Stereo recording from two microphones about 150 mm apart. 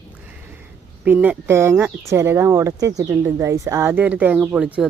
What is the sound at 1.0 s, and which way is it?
Speech, 10° right (ahead or behind).